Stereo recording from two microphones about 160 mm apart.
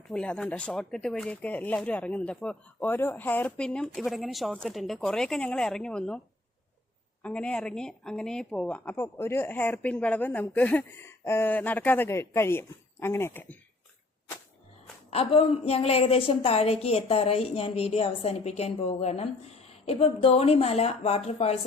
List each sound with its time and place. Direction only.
0.1 s speech: 5° left (ahead or behind)
7.2 s a woman's voice: 5° left (ahead or behind)
15.1 s a woman's voice: 35° left (ahead or behind)